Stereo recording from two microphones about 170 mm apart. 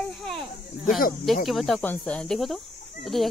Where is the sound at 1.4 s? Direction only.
Centre (ahead or behind).